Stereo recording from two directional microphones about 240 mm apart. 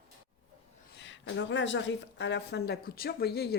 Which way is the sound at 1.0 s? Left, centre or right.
Left.